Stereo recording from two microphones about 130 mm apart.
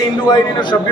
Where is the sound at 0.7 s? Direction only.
20° left (ahead or behind).